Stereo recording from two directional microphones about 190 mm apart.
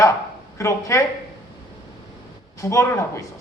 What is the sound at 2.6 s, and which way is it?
Speech, 15° left (ahead or behind).